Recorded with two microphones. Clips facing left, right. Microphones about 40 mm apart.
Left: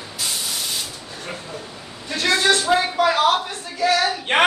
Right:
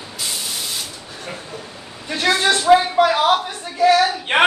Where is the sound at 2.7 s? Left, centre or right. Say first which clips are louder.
Right 5 dB; centre.